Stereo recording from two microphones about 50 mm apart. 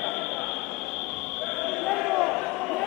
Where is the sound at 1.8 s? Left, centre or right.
Centre.